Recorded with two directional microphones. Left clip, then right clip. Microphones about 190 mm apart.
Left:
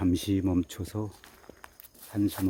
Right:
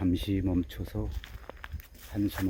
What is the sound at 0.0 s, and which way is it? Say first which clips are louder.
Speech: left 3 dB; 15° left (ahead or behind).